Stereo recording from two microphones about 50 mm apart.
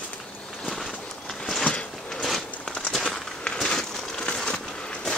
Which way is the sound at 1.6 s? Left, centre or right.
Left.